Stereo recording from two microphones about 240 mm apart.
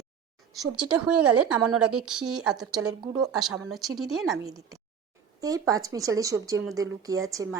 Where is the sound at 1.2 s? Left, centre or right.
Right.